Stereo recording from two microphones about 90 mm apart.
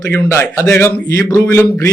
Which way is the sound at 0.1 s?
30° left (ahead or behind).